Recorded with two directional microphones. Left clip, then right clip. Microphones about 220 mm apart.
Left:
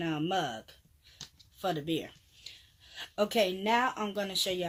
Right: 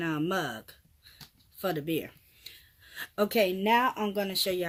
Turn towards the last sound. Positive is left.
turn(degrees=-40)  # may be behind; listen again after turning